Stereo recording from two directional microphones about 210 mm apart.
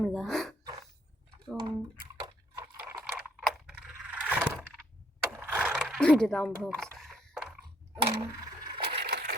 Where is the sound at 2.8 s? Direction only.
10° right (ahead or behind).